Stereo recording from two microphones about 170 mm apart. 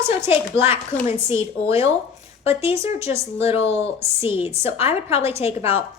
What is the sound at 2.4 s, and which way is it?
Speech, 35° left (ahead or behind).